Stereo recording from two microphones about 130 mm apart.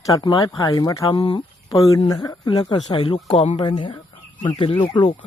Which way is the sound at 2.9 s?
45° left (ahead or behind).